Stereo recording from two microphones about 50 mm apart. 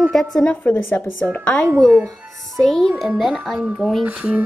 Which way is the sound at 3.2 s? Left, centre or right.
Centre.